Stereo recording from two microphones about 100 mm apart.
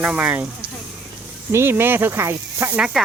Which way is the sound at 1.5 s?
25° right (ahead or behind).